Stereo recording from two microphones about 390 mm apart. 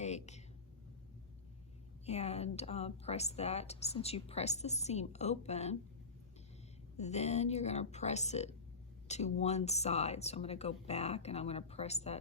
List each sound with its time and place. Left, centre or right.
0.0 s a sound: centre
2.0 s a woman's voice: centre
6.9 s a woman's voice: centre